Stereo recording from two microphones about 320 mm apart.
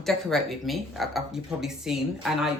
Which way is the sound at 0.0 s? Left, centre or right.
Centre.